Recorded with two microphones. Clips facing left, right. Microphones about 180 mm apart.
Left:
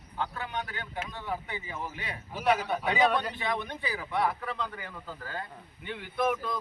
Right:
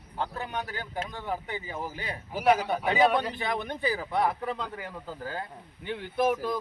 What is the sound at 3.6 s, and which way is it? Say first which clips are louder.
Speech: right 6 dB; 40° right (ahead or behind).